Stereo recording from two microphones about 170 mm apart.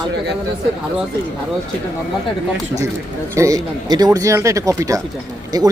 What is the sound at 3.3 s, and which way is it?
Speech, 20° right (ahead or behind).